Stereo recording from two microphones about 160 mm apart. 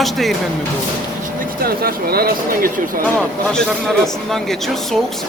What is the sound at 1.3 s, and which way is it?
Speech, 70° right (ahead or behind).